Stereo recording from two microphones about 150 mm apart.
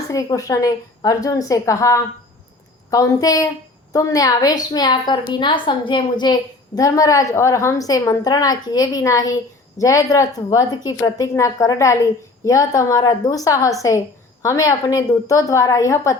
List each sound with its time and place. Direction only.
0.1 s a woman's voice: 20° left (ahead or behind)